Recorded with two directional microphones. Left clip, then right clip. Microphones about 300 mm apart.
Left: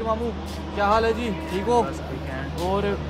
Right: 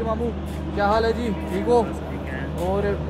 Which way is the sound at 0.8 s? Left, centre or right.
Centre.